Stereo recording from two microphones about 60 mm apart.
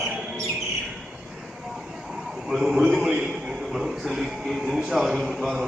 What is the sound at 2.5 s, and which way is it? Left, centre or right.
A man's voice, centre.